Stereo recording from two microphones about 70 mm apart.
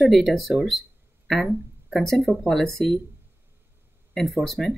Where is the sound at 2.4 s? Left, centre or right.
Centre.